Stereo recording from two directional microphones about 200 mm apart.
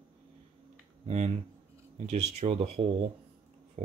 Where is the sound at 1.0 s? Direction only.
35° right (ahead or behind).